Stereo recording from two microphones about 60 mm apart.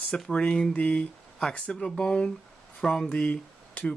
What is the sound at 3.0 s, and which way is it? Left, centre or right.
Speech, left.